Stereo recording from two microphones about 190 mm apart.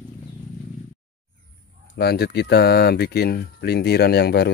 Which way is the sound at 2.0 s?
60° left (ahead or behind).